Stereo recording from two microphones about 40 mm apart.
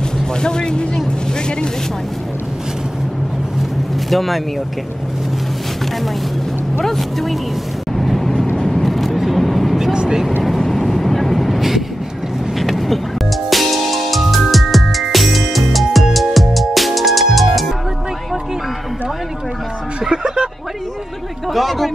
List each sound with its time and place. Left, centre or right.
0.4 s speech: centre
4.1 s speech: centre
6.8 s speech: centre
7.9 s vehicle: centre
8.8 s vehicle: centre
9.9 s vehicle: centre
10.8 s vehicle: centre
13.5 s music: centre
20.1 s a sound: centre
21.5 s a sound: centre